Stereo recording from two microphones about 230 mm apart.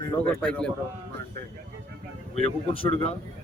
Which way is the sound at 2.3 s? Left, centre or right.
Left.